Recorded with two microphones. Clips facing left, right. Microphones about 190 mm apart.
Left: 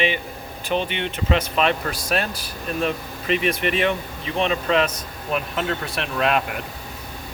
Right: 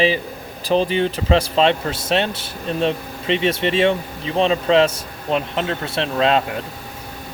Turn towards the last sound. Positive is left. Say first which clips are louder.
# right 4 dB
turn(degrees=-25)  # may be behind; listen again after turning